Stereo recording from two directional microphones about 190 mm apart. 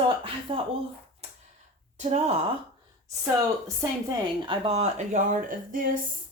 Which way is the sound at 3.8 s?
15° right (ahead or behind).